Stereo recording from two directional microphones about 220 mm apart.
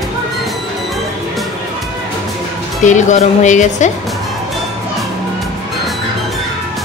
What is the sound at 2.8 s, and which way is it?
Speech, 35° left (ahead or behind).